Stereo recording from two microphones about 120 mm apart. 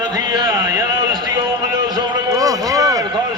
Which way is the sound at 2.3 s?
30° right (ahead or behind).